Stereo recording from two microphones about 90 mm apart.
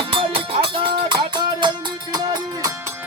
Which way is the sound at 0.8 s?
65° right (ahead or behind).